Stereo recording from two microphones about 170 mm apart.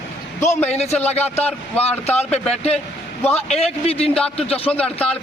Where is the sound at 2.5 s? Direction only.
40° left (ahead or behind).